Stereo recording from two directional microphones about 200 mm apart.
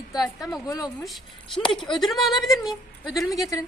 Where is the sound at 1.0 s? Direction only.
Centre (ahead or behind).